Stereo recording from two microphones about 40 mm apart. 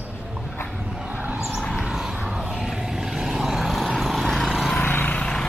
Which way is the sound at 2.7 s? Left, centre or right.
Centre.